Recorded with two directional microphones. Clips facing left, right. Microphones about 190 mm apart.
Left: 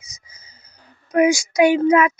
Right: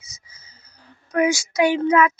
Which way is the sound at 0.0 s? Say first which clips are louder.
Left 2 dB; 15° left (ahead or behind).